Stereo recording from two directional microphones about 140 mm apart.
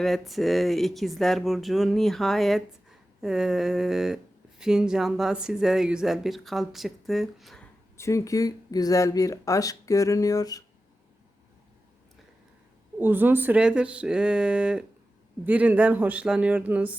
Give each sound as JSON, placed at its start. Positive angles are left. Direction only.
{"t": 0.0, "sound": "speech", "side_deg": 0}
{"t": 7.9, "sound": "speech", "side_deg": 20}
{"t": 13.0, "sound": "speech", "side_deg": -15}